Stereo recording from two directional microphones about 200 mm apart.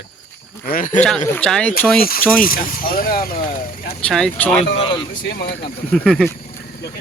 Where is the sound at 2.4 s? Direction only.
45° left (ahead or behind).